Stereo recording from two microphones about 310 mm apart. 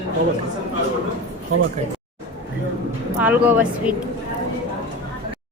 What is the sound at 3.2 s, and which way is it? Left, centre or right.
Speech, centre.